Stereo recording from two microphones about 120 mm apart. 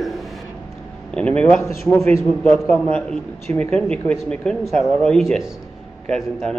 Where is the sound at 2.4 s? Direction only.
15° left (ahead or behind).